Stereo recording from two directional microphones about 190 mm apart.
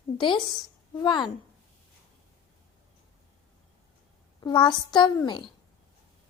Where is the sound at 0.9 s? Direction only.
25° left (ahead or behind).